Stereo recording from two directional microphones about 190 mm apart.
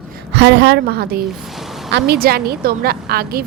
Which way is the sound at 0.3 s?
65° right (ahead or behind).